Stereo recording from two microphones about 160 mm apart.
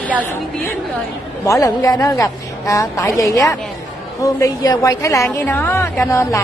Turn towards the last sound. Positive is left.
turn(degrees=20)  # may be behind; listen again after turning